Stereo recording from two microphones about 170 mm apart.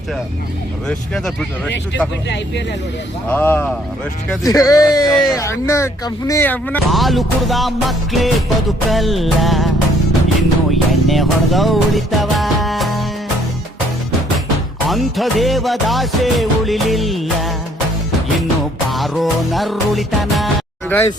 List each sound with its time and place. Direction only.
0.9 s music: 5° left (ahead or behind)
3.2 s speech: 10° left (ahead or behind)
4.4 s speech: 20° left (ahead or behind)
6.9 s music: centre (ahead or behind)
14.8 s music: centre (ahead or behind)
18.9 s music: centre (ahead or behind)